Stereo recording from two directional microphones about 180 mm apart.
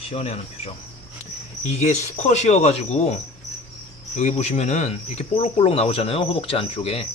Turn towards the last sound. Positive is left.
turn(degrees=30)  # may be behind; listen again after turning